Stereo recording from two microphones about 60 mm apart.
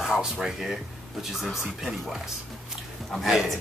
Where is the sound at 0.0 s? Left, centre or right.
Centre.